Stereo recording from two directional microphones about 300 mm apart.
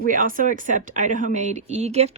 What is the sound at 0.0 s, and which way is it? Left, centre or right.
Speech, right.